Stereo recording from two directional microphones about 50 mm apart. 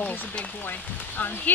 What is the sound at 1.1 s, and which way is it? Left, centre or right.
Speech, left.